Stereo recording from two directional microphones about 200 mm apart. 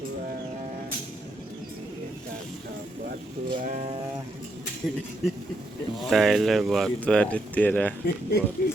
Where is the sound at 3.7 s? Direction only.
35° right (ahead or behind).